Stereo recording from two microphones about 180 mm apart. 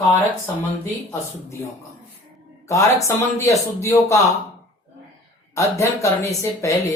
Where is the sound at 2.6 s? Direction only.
15° left (ahead or behind).